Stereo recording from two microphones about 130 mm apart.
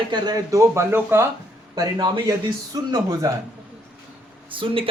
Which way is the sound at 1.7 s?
30° right (ahead or behind).